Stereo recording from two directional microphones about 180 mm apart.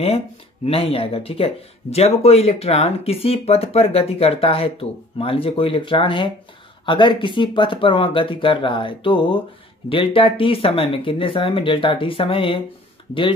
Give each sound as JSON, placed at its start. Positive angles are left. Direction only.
{"t": 0.7, "sound": "speech", "side_deg": 30}